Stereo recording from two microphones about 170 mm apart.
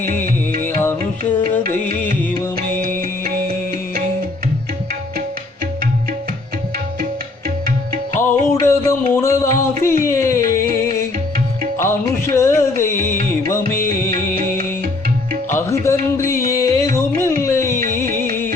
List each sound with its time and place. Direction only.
0.6 s music: 15° left (ahead or behind)
2.6 s music: 60° right (ahead or behind)
8.2 s music: 15° left (ahead or behind)
11.8 s music: 15° left (ahead or behind)
15.4 s music: 15° left (ahead or behind)